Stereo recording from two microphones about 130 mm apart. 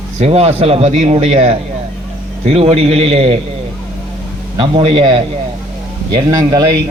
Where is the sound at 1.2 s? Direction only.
50° right (ahead or behind).